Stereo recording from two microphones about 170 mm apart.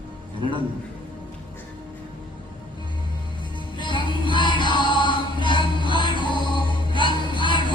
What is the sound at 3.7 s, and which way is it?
Music, 25° left (ahead or behind).